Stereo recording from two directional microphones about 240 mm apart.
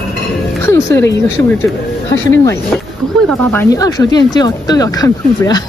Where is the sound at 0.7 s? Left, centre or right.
Centre.